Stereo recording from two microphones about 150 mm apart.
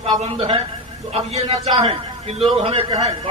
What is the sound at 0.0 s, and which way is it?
A man's voice, 40° right (ahead or behind).